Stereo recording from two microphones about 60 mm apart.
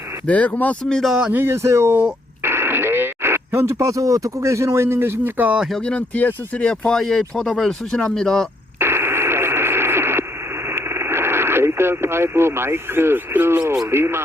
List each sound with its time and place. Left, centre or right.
0.3 s speech: left
0.9 s speech: centre
1.3 s speech: right
2.4 s radio: right
3.8 s speech: right
6.0 s speech: left
6.7 s speech: centre
8.8 s radio: right
13.8 s speech: right